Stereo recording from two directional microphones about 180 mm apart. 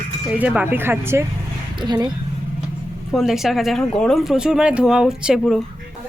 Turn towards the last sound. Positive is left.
turn(degrees=0)  # may be behind; listen again after turning